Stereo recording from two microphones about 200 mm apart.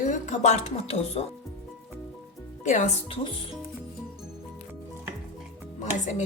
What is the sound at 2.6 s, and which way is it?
Speech, 40° left (ahead or behind).